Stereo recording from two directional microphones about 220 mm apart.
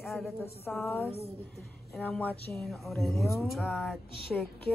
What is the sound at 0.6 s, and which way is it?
A woman's voice, 10° left (ahead or behind).